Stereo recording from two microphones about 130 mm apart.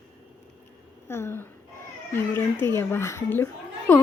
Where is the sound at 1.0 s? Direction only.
20° left (ahead or behind).